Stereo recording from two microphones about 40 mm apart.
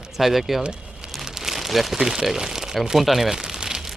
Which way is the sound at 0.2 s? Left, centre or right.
Centre.